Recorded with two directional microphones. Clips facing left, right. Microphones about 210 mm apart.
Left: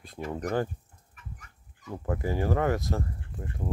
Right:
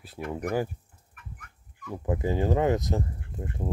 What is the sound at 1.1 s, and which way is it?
Fowl, 55° right (ahead or behind).